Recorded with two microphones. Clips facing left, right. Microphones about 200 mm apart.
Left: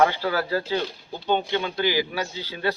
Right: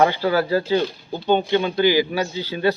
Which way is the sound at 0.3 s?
20° right (ahead or behind).